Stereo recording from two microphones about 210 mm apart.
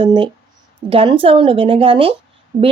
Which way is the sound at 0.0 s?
20° right (ahead or behind).